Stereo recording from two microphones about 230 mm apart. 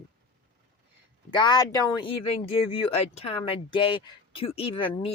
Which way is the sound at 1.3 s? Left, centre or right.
Centre.